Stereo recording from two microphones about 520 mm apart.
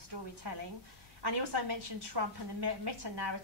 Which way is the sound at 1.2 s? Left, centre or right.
Right.